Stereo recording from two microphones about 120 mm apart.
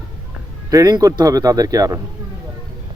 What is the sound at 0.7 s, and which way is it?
Speech, 30° right (ahead or behind).